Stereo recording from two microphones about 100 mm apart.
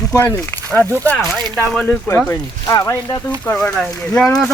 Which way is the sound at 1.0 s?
15° left (ahead or behind).